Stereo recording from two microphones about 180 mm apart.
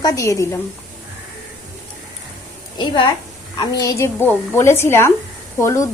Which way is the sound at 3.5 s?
20° left (ahead or behind).